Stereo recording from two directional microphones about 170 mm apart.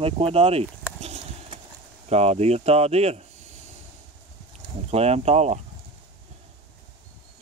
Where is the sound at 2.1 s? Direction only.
40° right (ahead or behind).